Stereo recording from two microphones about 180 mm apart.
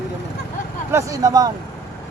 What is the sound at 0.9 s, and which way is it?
Speech, 15° right (ahead or behind).